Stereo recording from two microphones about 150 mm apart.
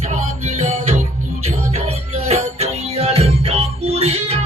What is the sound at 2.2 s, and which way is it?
Music, 45° right (ahead or behind).